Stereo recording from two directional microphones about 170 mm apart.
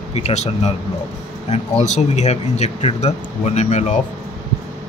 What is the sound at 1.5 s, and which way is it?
Speech, 40° left (ahead or behind).